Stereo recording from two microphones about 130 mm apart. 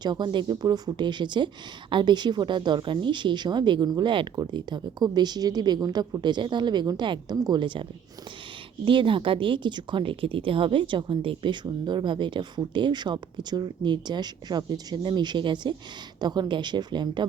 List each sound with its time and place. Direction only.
0.0 s speech: 35° right (ahead or behind)